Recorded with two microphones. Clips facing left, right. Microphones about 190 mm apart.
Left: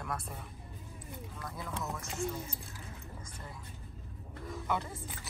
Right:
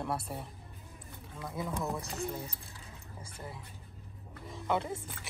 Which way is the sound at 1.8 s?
35° right (ahead or behind).